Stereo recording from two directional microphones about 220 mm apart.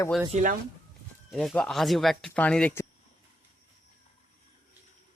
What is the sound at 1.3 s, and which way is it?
Speech, centre (ahead or behind).